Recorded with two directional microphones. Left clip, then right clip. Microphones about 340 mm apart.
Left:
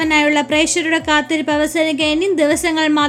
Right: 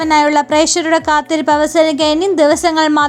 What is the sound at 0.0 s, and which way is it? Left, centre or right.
A woman's voice, centre.